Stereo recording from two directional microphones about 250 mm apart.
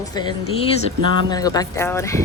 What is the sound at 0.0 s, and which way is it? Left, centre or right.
A woman's voice, centre.